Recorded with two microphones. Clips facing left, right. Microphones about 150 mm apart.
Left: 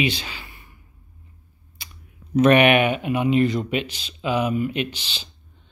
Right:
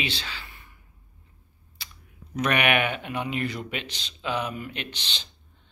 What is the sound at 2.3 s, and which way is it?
Speech, 25° left (ahead or behind).